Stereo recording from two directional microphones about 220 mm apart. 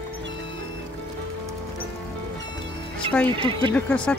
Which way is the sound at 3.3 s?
25° right (ahead or behind).